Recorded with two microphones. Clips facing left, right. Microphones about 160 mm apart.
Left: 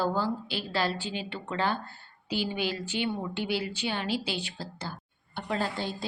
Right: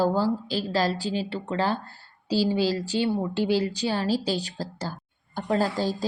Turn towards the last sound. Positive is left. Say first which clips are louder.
# right 7 dB
turn(degrees=-40)  # may be behind; listen again after turning